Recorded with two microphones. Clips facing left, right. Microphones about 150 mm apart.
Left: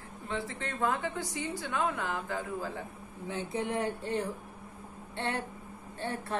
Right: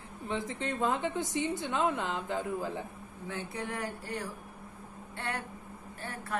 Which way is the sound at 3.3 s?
20° left (ahead or behind).